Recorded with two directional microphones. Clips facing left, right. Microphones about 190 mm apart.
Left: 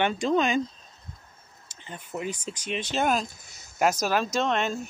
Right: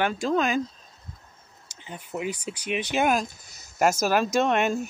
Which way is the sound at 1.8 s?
10° right (ahead or behind).